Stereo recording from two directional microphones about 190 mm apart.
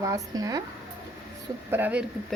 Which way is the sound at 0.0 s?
20° right (ahead or behind).